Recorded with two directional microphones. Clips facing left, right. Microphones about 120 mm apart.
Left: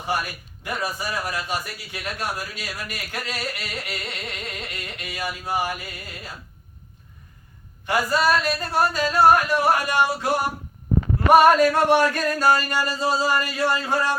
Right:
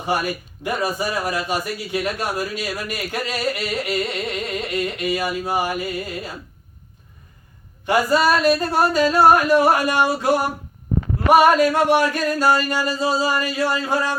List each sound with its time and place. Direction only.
0.0 s a man's voice: 15° right (ahead or behind)
7.9 s a man's voice: 15° right (ahead or behind)
11.3 s a sound: 5° right (ahead or behind)